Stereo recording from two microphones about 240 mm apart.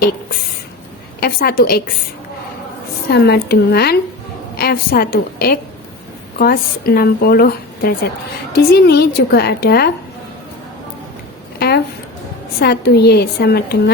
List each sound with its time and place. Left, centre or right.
1.2 s speech: left
3.1 s speech: left
12.5 s speech: left